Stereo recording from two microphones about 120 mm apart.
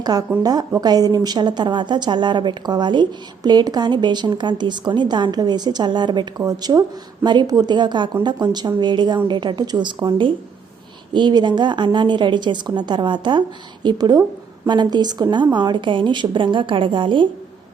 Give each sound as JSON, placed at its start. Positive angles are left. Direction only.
{"t": 0.0, "sound": "a woman's voice", "side_deg": -35}